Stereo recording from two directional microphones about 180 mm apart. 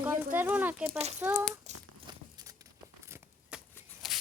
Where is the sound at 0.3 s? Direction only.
10° right (ahead or behind).